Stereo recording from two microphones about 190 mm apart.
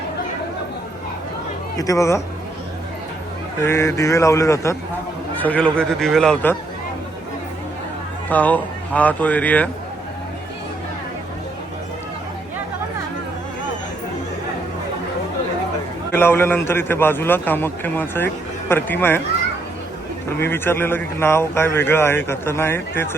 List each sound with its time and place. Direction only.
1.7 s speech: 20° left (ahead or behind)
3.6 s a man's voice: 15° left (ahead or behind)
8.3 s speech: 10° left (ahead or behind)
16.1 s speech: 10° left (ahead or behind)
20.4 s speech: 10° left (ahead or behind)